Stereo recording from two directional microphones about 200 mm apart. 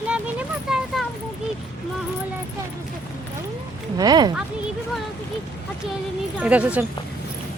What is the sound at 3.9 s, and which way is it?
Speech, 20° right (ahead or behind).